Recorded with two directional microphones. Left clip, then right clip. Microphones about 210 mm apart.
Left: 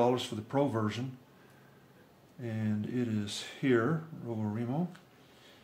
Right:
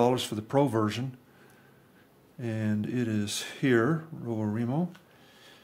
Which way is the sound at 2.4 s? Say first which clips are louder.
Right 5 dB; 55° right (ahead or behind).